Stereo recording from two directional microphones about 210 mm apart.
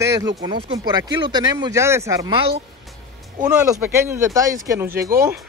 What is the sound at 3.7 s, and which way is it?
Speech, 15° right (ahead or behind).